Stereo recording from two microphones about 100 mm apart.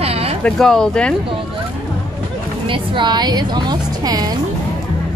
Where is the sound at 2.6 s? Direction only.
60° right (ahead or behind); by 4.4 s 40° right (ahead or behind).